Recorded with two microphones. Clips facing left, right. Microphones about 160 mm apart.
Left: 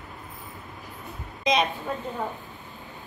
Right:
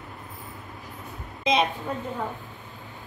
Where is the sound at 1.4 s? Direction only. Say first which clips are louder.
Right 1 dB; 25° right (ahead or behind).